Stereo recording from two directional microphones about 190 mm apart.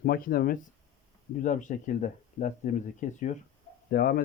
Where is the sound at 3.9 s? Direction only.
50° left (ahead or behind).